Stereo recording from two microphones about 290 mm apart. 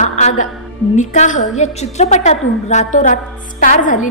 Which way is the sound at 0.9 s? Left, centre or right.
Left.